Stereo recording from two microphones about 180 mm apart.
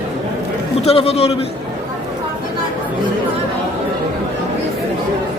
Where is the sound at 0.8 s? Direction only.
35° left (ahead or behind).